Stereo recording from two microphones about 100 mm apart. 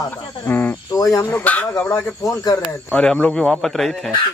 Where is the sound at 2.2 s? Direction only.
35° left (ahead or behind).